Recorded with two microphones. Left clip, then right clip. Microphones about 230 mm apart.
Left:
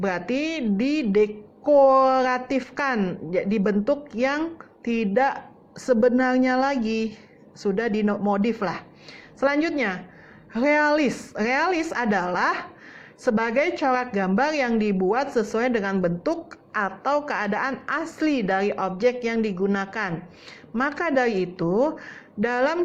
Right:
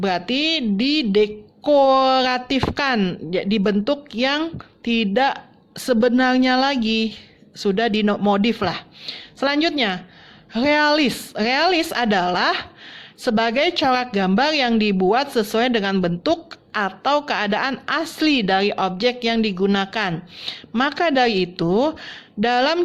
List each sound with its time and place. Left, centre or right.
0.0 s a woman's voice: right